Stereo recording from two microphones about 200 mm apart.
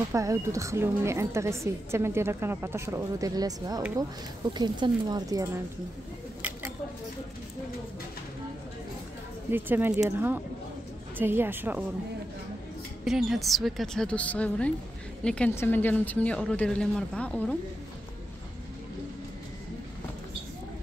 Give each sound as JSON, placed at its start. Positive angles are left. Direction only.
{"t": 0.1, "sound": "a woman's voice", "side_deg": -15}
{"t": 9.5, "sound": "a woman's voice", "side_deg": -10}
{"t": 13.0, "sound": "a woman's voice", "side_deg": 0}